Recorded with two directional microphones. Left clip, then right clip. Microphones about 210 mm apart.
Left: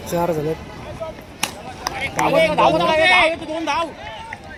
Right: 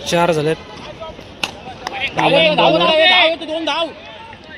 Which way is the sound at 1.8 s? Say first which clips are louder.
Right 3 dB; 55° left (ahead or behind).